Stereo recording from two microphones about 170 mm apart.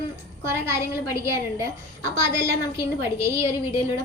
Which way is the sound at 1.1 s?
15° right (ahead or behind).